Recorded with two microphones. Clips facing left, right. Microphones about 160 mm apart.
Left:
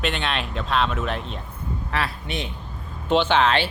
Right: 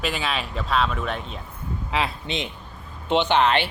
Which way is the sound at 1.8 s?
20° right (ahead or behind).